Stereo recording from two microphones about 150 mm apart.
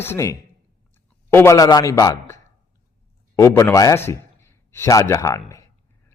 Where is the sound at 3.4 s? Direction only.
15° left (ahead or behind).